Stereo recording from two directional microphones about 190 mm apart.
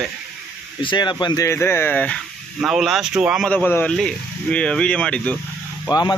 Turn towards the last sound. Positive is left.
turn(degrees=20)  # may be behind; listen again after turning